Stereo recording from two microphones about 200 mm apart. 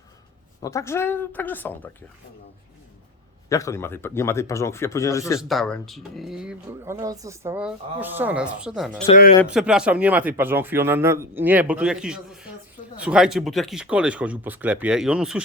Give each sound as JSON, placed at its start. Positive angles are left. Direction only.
{"t": 0.6, "sound": "speech", "side_deg": 15}
{"t": 3.5, "sound": "speech", "side_deg": 15}
{"t": 5.4, "sound": "speech", "side_deg": 0}
{"t": 9.0, "sound": "speech", "side_deg": 45}
{"t": 9.5, "sound": "speech", "side_deg": -5}